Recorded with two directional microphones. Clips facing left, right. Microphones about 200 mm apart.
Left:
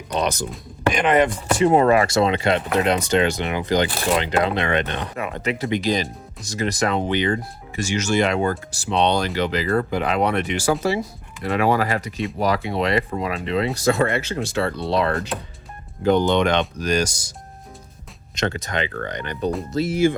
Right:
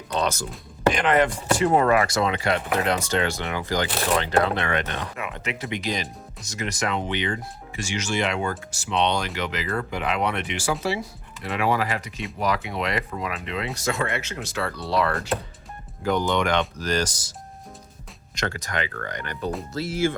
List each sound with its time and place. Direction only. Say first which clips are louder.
0.1 s speech: left 2 dB; 15° left (ahead or behind)
5.1 s speech: left 6 dB; 35° left (ahead or behind); by 17.3 s 10° left (ahead or behind)
18.3 s speech: left 4 dB; 25° left (ahead or behind)